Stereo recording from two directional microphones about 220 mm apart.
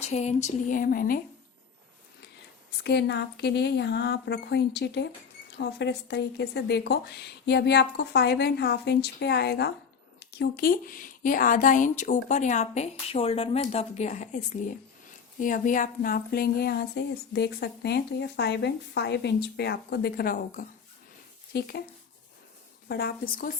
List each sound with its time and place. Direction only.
0.0 s a woman's voice: 30° left (ahead or behind)
2.8 s a woman's voice: 50° left (ahead or behind)
22.9 s speech: 45° left (ahead or behind)